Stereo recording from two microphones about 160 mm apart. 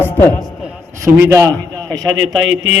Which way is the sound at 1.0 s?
20° right (ahead or behind).